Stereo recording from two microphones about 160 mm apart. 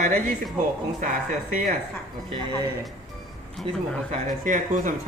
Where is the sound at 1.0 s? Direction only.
55° right (ahead or behind).